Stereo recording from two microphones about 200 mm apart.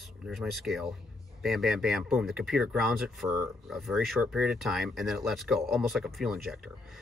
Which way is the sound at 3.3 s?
15° right (ahead or behind).